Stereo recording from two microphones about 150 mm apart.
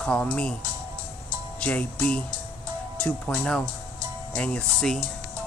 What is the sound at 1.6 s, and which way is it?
Speech, 10° left (ahead or behind).